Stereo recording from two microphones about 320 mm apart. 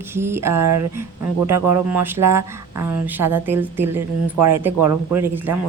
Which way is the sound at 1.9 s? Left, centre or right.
Centre.